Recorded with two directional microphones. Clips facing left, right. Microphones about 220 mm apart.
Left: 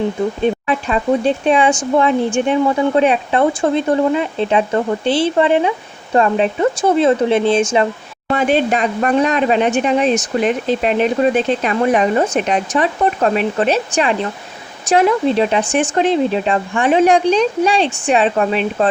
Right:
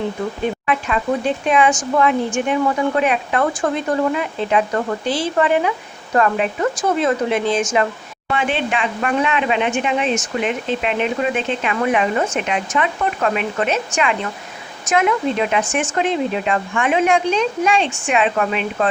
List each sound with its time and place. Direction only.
0.7 s speech: 30° left (ahead or behind)
8.3 s speech: 40° left (ahead or behind)